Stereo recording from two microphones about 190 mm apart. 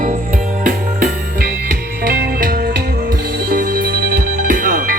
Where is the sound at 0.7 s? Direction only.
50° right (ahead or behind).